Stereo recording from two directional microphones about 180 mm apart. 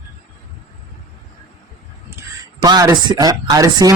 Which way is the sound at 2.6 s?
20° right (ahead or behind).